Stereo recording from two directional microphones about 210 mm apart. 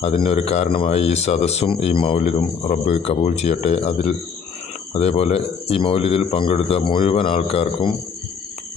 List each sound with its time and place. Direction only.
0.2 s speech: 30° left (ahead or behind)